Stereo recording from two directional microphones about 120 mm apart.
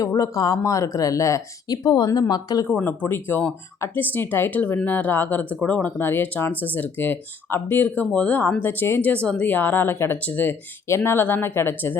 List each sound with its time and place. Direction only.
0.0 s speech: 25° left (ahead or behind)
2.6 s speech: 15° left (ahead or behind)